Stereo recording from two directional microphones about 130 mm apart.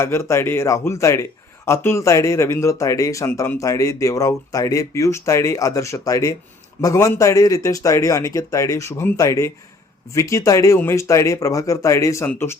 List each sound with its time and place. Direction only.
0.0 s a man's voice: 20° left (ahead or behind)